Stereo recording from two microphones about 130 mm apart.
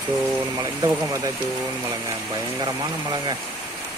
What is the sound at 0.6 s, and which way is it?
Speech, 25° right (ahead or behind).